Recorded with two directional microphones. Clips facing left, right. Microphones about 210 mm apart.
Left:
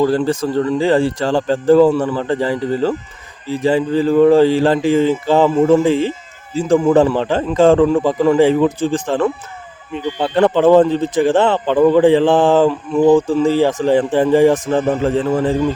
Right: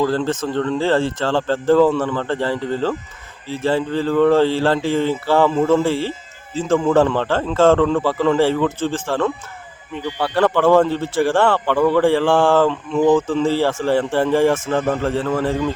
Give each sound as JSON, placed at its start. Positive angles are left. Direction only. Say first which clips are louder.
{"t": 0.0, "sound": "speech", "louder": "left 4 dB", "side_deg": 15}